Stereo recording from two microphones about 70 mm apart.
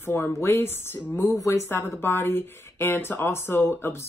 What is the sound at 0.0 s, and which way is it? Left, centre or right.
Speech, left.